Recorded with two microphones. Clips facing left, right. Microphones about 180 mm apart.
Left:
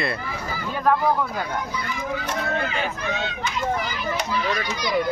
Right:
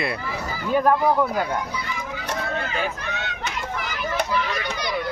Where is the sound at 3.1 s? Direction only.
65° right (ahead or behind).